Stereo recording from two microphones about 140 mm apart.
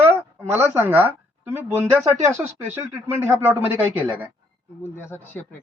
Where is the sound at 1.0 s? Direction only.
20° right (ahead or behind).